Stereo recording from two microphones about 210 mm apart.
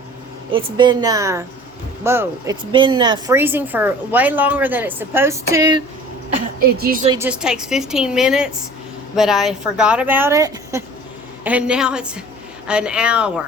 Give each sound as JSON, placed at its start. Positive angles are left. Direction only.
{"t": 0.5, "sound": "a woman's voice", "side_deg": -20}
{"t": 2.7, "sound": "a woman's voice", "side_deg": -25}
{"t": 3.3, "sound": "a woman's voice", "side_deg": -10}
{"t": 6.6, "sound": "a woman's voice", "side_deg": -45}
{"t": 7.1, "sound": "speech", "side_deg": -10}